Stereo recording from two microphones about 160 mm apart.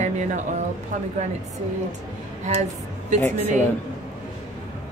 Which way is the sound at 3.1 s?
50° right (ahead or behind).